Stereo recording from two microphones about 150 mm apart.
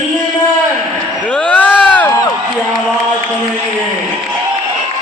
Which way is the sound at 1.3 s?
10° left (ahead or behind).